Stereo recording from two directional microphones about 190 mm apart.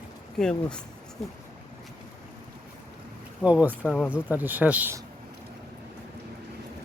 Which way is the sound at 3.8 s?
10° left (ahead or behind).